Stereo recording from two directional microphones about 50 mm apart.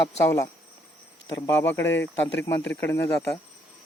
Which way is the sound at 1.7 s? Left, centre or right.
Left.